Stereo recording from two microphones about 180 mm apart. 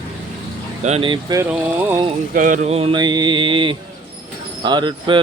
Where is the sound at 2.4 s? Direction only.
45° right (ahead or behind).